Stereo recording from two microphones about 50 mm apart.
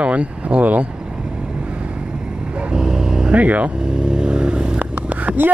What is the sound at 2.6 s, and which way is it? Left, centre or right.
Vehicle, centre.